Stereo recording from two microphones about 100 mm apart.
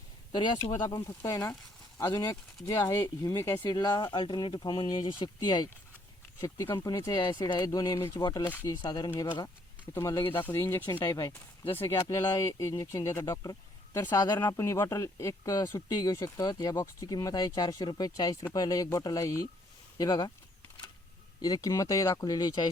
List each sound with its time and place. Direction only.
0.3 s speech: 50° left (ahead or behind)
0.9 s speech: 30° left (ahead or behind); by 5.6 s 45° left (ahead or behind)
6.7 s speech: 40° left (ahead or behind)
8.2 s speech: 40° left (ahead or behind)
9.9 s speech: 30° left (ahead or behind)
11.0 s speech: 40° left (ahead or behind)
14.4 s speech: 30° left (ahead or behind)
21.4 s speech: 35° left (ahead or behind)